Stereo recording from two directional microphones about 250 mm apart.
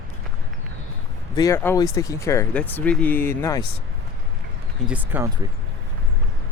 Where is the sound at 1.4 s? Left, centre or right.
Centre.